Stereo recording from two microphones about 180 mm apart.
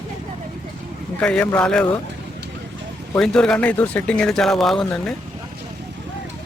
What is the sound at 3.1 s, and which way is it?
Speech, 5° left (ahead or behind).